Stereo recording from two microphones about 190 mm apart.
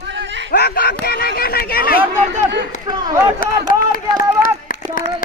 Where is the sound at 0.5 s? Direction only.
55° left (ahead or behind).